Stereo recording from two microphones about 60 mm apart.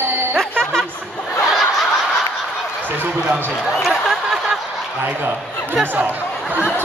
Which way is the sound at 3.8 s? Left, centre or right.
Centre.